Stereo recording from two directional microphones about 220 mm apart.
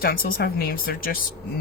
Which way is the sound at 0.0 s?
40° left (ahead or behind).